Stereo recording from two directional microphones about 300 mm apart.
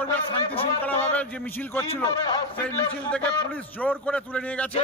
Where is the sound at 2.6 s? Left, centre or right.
Centre.